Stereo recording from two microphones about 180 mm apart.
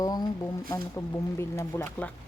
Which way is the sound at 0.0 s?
20° left (ahead or behind).